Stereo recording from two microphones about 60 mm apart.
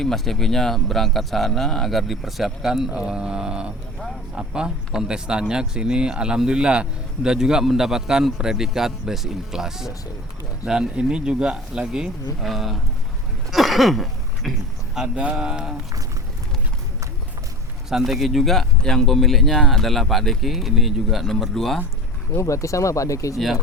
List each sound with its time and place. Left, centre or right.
0.0 s speech: centre
12.4 s speech: centre
13.5 s a sound: centre
14.9 s speech: centre
17.8 s speech: centre
22.4 s speech: left